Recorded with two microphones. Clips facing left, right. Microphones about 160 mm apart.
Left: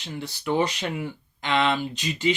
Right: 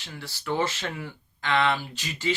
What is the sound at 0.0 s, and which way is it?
Speech, 20° left (ahead or behind).